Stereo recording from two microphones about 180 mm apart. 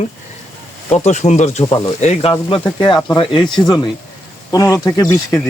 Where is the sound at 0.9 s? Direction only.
40° left (ahead or behind).